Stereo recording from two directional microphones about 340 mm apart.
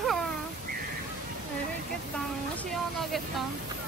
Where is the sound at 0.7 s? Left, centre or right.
Right.